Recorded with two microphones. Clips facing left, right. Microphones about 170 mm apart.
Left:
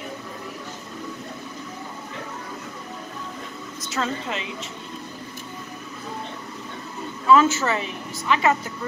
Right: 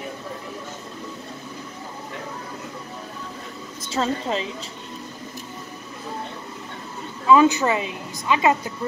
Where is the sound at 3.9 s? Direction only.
30° right (ahead or behind).